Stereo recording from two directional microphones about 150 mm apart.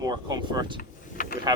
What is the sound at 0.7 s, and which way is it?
Vehicle, 80° left.